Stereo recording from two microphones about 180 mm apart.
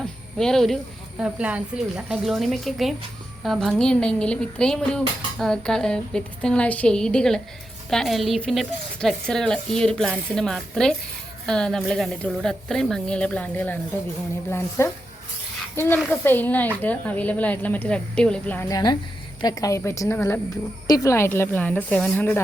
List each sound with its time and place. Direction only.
0.0 s cricket: 5° left (ahead or behind)
1.2 s speech: 5° right (ahead or behind); by 13.7 s 10° left (ahead or behind)
14.8 s a woman's voice: 15° left (ahead or behind)
18.7 s a woman's voice: 25° left (ahead or behind)